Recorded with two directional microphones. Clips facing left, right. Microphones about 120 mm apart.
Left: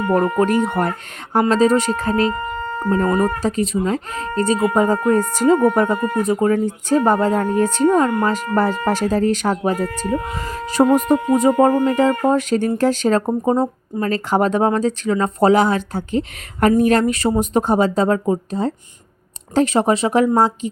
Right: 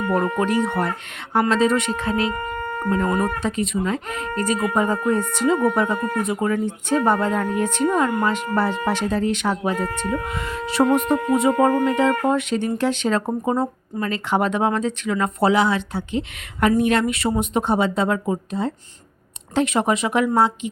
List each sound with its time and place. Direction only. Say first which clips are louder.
0.1 s speech: left 5 dB; 45° left (ahead or behind)
13.4 s speech: left 4 dB; 30° left (ahead or behind)